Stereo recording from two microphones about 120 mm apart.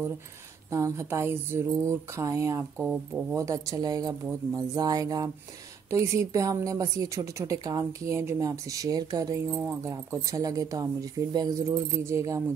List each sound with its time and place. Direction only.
0.7 s speech: 25° right (ahead or behind)